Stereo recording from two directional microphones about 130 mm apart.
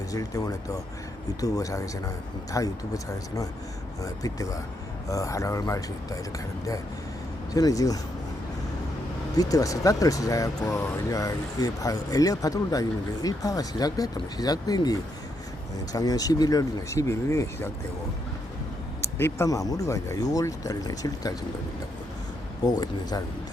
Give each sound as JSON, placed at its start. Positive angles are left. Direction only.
{"t": 0.1, "sound": "speech", "side_deg": 25}
{"t": 7.5, "sound": "speech", "side_deg": 25}
{"t": 9.3, "sound": "speech", "side_deg": 30}
{"t": 19.0, "sound": "speech", "side_deg": 20}
{"t": 22.6, "sound": "speech", "side_deg": 30}